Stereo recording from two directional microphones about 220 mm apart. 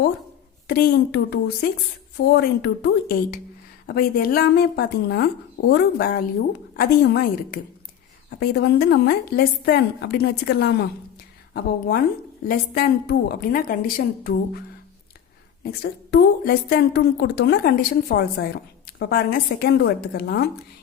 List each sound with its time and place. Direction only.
0.7 s a woman's voice: 45° left (ahead or behind)
15.6 s a woman's voice: 45° left (ahead or behind)